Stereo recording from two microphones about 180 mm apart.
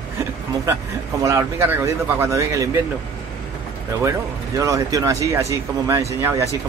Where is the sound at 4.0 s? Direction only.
15° right (ahead or behind).